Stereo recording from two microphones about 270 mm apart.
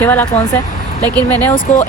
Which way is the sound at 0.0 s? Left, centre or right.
Centre.